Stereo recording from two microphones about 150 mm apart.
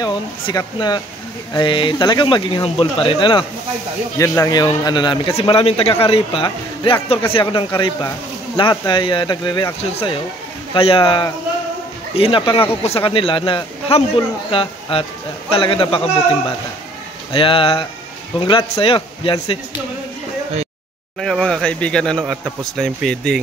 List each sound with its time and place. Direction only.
0.0 s a man's voice: 30° left (ahead or behind)
17.3 s a man's voice: 35° left (ahead or behind)
21.2 s speech: 5° left (ahead or behind)
22.2 s speech: 5° right (ahead or behind)